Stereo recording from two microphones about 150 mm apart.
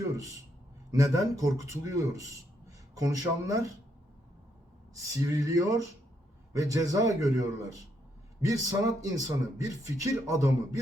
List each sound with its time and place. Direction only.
0.9 s a man's voice: 20° right (ahead or behind)
4.9 s a man's voice: 20° right (ahead or behind)